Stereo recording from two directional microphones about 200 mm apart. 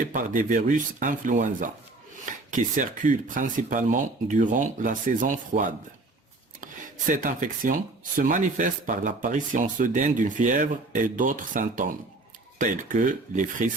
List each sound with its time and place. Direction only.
0.1 s speech: 40° right (ahead or behind)
7.1 s speech: 40° right (ahead or behind)